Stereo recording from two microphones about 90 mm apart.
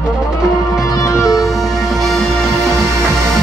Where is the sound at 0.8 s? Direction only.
35° left (ahead or behind).